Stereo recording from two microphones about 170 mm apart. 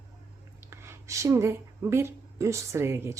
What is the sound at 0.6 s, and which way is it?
Speech, 15° right (ahead or behind).